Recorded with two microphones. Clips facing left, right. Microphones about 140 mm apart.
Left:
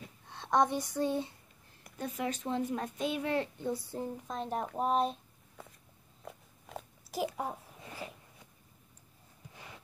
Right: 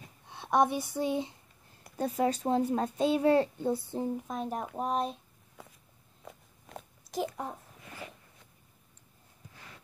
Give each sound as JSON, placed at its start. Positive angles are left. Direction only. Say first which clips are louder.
{"t": 0.3, "sound": "speech", "louder": "right 2 dB", "side_deg": -10}
{"t": 2.0, "sound": "a child's voice", "louder": "right 7 dB", "side_deg": -35}
{"t": 4.3, "sound": "speech", "louder": "right 1 dB", "side_deg": -5}
{"t": 6.2, "sound": "a sound", "louder": "left 1 dB", "side_deg": 0}